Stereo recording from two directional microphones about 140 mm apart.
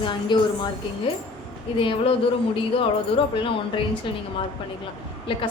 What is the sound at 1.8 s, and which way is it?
A woman's voice, 40° left (ahead or behind).